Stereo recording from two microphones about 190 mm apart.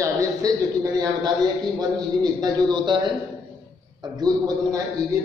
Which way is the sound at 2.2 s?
20° right (ahead or behind).